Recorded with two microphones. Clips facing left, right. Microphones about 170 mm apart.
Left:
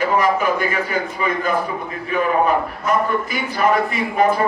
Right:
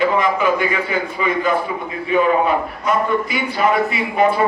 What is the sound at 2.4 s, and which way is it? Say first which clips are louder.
A man's voice: even; 45° left (ahead or behind).